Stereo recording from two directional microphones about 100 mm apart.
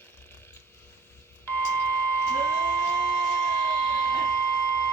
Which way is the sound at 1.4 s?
20° left (ahead or behind).